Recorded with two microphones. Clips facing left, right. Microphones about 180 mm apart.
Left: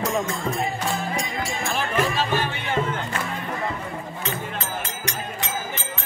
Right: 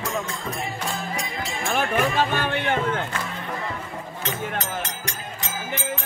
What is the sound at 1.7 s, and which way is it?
Music, 55° right (ahead or behind).